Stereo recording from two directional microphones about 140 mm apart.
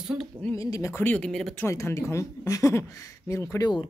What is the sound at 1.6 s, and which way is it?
Speech, 20° left (ahead or behind).